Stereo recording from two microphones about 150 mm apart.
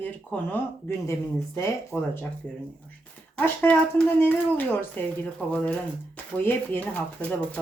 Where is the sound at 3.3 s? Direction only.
10° left (ahead or behind).